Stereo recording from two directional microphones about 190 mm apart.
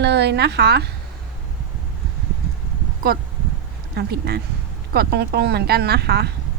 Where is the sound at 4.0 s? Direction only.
55° right (ahead or behind).